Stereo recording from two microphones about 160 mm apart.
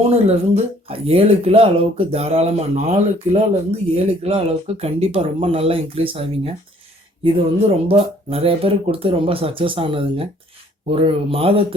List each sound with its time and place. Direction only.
0.1 s speech: 40° right (ahead or behind)
7.9 s speech: 35° right (ahead or behind)